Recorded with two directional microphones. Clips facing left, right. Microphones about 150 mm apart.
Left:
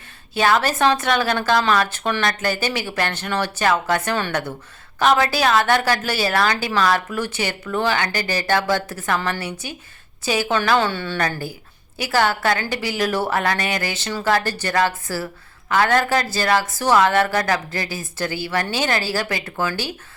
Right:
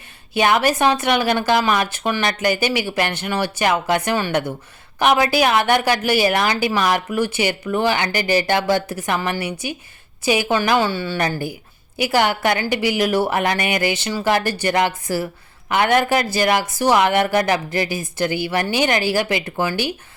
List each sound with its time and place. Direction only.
0.3 s speech: 15° right (ahead or behind)